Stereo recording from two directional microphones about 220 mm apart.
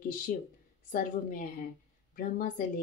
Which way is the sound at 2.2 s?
35° left (ahead or behind).